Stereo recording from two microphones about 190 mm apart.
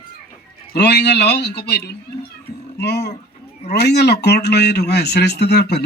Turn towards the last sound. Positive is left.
turn(degrees=60)  # may be behind; listen again after turning